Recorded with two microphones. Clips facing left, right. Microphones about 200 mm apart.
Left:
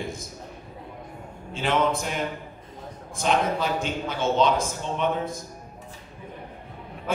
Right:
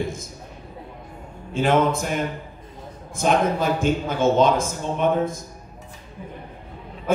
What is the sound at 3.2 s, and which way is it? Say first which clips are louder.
A man's voice: right 4 dB; 50° right (ahead or behind).